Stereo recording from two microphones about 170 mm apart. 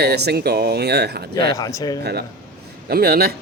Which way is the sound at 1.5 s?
20° left (ahead or behind).